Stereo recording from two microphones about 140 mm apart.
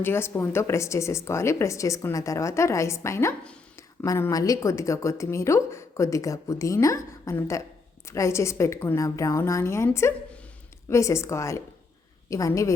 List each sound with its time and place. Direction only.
0.0 s a woman's voice: 15° left (ahead or behind)